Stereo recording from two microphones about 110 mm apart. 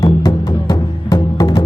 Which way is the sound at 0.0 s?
35° left (ahead or behind).